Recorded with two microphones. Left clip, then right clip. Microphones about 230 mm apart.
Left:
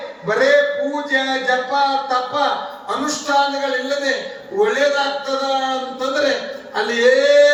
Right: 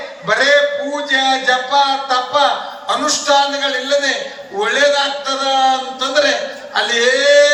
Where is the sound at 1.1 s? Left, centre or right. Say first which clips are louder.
Right 5 dB; centre.